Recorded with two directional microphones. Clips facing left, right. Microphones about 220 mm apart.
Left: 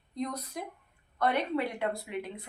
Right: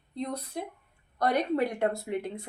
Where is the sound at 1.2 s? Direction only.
40° right (ahead or behind).